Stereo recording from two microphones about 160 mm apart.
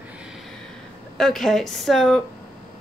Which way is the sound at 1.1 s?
Centre (ahead or behind).